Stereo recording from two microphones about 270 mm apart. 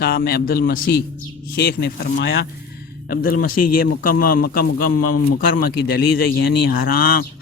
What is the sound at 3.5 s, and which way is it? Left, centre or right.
Speech, left.